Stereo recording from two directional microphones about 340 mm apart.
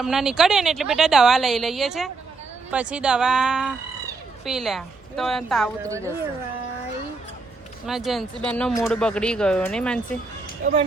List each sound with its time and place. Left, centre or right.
0.0 s speech: centre
5.8 s speech: centre
7.9 s speech: centre
10.6 s speech: right